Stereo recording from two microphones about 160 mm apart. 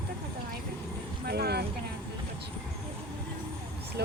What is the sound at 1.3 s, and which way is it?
Speech, 85° right.